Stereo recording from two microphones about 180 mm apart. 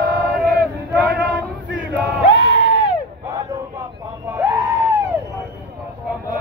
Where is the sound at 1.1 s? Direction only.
70° right (ahead or behind).